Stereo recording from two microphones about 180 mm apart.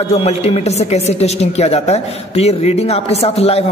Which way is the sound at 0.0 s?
35° left (ahead or behind).